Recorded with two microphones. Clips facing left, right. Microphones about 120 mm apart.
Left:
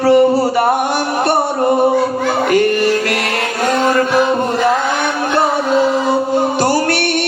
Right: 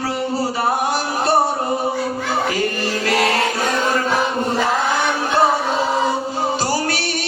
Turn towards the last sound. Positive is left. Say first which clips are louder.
# left 6 dB
turn(degrees=65)  # may be behind; listen again after turning